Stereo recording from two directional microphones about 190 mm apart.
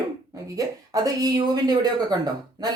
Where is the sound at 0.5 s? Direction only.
20° right (ahead or behind).